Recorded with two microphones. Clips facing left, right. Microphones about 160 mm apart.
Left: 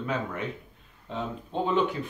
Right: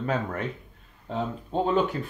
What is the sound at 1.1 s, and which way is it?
Speech, 40° right (ahead or behind).